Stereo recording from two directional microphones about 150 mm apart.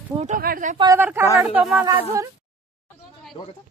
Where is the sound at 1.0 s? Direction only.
15° right (ahead or behind).